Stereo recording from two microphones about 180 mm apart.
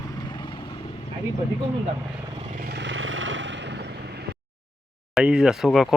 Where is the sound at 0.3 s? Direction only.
25° left (ahead or behind).